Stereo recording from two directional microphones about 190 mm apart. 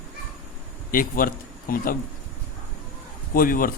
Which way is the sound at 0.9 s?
50° left (ahead or behind).